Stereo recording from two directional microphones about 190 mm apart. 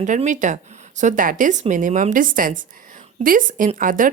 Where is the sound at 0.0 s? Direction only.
40° right (ahead or behind).